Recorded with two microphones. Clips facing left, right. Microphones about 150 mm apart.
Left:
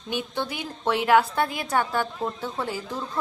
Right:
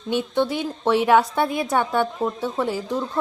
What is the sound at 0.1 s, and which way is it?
A woman's voice, 25° right (ahead or behind).